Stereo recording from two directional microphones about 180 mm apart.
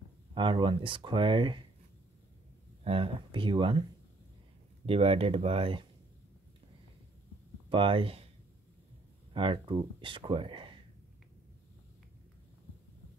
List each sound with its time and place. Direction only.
0.3 s speech: 30° right (ahead or behind)
2.8 s speech: 30° right (ahead or behind)
4.8 s speech: 35° right (ahead or behind)
7.7 s speech: 30° right (ahead or behind)
9.3 s speech: 30° right (ahead or behind)